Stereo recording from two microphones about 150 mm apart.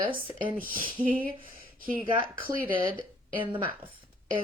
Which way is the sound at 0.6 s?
70° right (ahead or behind).